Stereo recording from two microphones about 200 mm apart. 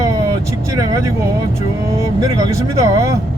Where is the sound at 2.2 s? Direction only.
15° right (ahead or behind).